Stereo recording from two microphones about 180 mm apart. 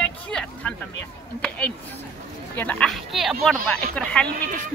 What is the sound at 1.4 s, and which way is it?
Speech, 5° left (ahead or behind).